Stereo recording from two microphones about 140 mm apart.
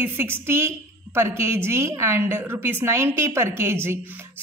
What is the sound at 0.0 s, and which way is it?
Speech, 15° right (ahead or behind).